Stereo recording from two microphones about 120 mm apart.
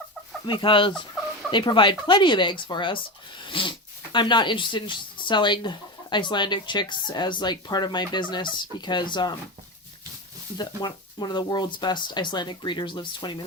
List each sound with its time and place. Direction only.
0.4 s chicken: 40° left (ahead or behind)
1.5 s speech: 40° left (ahead or behind)
10.6 s speech: 35° left (ahead or behind)